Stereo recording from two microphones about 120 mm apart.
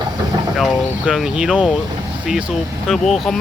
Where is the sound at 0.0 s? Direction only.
35° right (ahead or behind).